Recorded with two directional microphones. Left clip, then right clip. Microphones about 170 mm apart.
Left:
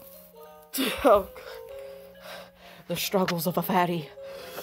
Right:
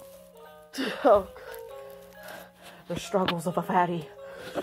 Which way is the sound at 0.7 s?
20° left (ahead or behind).